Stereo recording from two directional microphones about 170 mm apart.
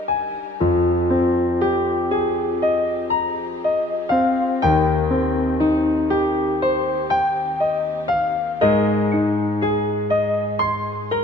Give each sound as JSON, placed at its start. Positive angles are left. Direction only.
{"t": 8.7, "sound": "music", "side_deg": 35}